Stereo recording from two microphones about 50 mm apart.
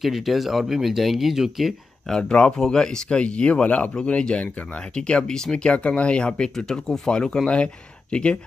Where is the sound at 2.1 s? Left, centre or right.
Centre.